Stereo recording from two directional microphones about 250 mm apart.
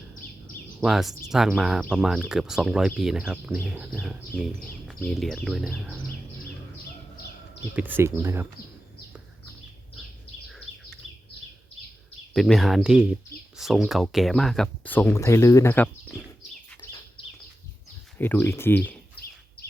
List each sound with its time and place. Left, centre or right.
0.8 s speech: centre
7.8 s speech: centre
12.3 s speech: centre
16.8 s bird: centre
18.2 s speech: centre
19.2 s bird: left